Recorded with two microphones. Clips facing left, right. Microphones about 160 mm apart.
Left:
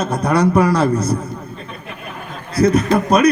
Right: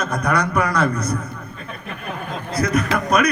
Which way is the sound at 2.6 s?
30° left (ahead or behind).